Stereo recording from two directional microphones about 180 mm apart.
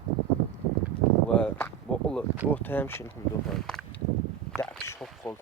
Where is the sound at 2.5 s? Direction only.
10° left (ahead or behind).